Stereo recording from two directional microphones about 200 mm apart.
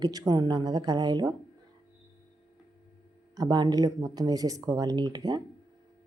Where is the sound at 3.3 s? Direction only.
20° right (ahead or behind).